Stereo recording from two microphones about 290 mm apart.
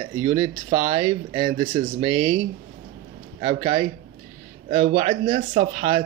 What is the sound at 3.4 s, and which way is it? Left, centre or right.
Speech, centre.